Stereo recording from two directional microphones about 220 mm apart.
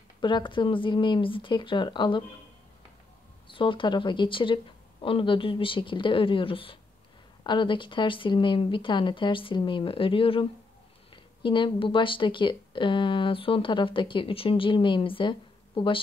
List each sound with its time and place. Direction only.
0.2 s speech: 20° left (ahead or behind)
3.5 s speech: 20° left (ahead or behind)
11.4 s speech: 20° left (ahead or behind)